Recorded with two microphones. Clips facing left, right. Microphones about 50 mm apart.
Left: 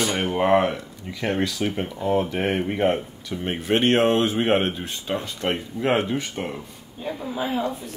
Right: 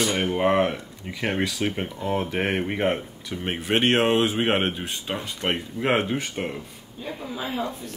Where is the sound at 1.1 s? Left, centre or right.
Right.